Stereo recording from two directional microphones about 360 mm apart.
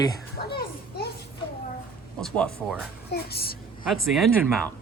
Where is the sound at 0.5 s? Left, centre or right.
Left.